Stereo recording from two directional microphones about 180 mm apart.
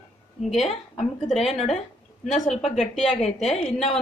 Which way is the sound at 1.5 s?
35° left (ahead or behind).